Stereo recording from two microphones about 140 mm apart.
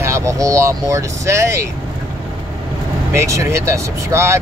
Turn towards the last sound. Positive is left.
turn(degrees=-20)  # may be behind; listen again after turning